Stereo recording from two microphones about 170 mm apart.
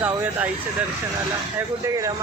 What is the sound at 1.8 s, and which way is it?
Speech, 20° right (ahead or behind).